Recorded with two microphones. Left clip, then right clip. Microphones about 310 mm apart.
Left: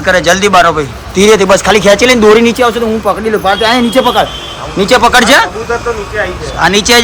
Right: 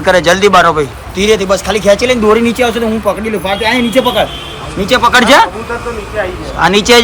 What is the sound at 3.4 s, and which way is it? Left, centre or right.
Speech, centre.